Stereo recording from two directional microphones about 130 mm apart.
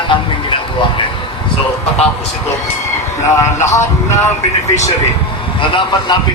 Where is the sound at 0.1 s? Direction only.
40° left (ahead or behind).